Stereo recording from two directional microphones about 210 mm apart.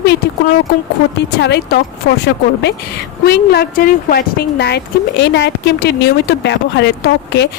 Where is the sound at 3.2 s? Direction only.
50° left (ahead or behind).